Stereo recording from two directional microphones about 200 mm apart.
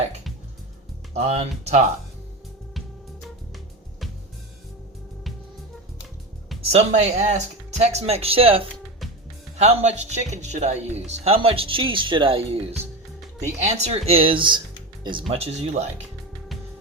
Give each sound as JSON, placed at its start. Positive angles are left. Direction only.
{"t": 1.1, "sound": "speech", "side_deg": -35}
{"t": 6.7, "sound": "speech", "side_deg": -35}